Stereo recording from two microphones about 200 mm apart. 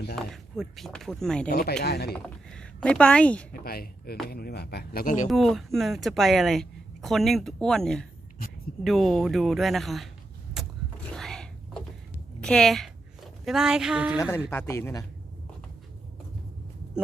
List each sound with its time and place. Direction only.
0.2 s speech: centre (ahead or behind)
1.5 s speech: 50° left (ahead or behind)
2.1 s speech: 5° left (ahead or behind)
3.6 s speech: 50° left (ahead or behind)
5.3 s speech: centre (ahead or behind)
11.1 s a sound: 5° left (ahead or behind)
12.4 s speech: 5° left (ahead or behind)
14.2 s speech: 15° left (ahead or behind)